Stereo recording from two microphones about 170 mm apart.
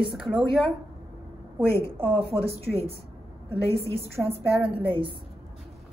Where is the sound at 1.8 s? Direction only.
30° right (ahead or behind).